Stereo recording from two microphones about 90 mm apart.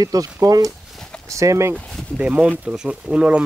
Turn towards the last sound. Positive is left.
turn(degrees=-15)  # may be behind; listen again after turning